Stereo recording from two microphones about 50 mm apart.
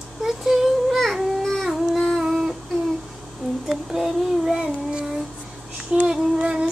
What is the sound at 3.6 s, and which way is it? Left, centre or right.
Child singing, centre.